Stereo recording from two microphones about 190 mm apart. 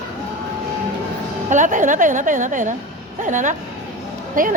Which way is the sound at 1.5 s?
40° right (ahead or behind).